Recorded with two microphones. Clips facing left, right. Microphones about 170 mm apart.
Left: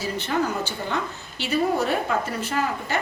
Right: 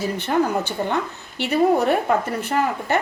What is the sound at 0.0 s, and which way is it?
A woman's voice, 60° right (ahead or behind).